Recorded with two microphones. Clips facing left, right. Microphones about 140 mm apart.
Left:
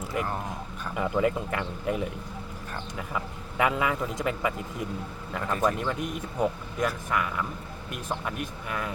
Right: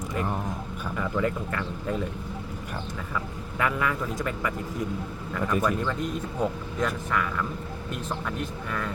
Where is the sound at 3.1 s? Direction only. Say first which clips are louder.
Even; 20° left (ahead or behind).